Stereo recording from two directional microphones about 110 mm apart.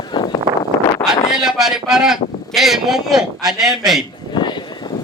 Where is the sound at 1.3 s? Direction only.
5° right (ahead or behind).